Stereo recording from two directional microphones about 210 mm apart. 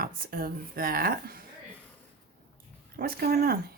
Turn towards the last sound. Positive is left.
turn(degrees=-45)  # may be behind; listen again after turning